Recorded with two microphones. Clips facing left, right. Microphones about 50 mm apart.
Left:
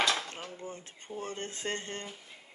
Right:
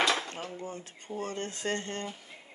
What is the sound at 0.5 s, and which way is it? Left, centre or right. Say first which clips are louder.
Speech: right 3 dB; right.